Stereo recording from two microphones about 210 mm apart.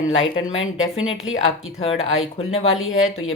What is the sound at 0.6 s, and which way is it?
Speech, 75° left (ahead or behind).